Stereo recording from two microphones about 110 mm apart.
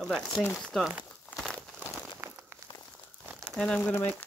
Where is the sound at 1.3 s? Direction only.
Centre (ahead or behind).